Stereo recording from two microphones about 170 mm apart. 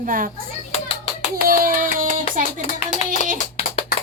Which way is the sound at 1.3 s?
55° right (ahead or behind).